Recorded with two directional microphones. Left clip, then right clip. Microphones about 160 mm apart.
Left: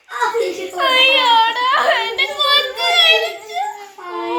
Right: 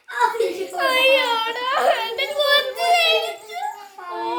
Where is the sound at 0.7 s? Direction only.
55° right (ahead or behind).